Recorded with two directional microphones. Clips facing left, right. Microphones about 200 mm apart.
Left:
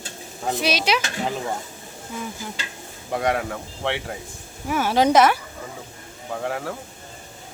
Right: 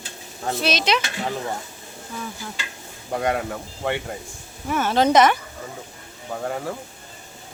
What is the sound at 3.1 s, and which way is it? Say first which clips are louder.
Speech: even; centre (ahead or behind).